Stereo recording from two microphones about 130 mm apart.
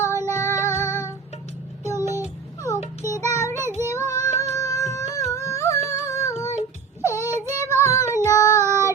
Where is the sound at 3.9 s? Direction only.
25° left (ahead or behind).